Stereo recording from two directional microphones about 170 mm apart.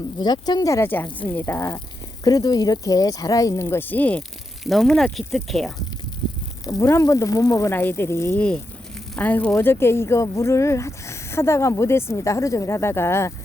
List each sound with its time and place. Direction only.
0.2 s speech: 25° left (ahead or behind); by 5.7 s centre (ahead or behind)
6.7 s speech: 20° left (ahead or behind)